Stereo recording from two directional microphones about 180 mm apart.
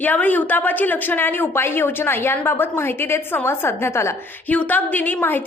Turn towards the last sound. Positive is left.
turn(degrees=10)  # may be behind; listen again after turning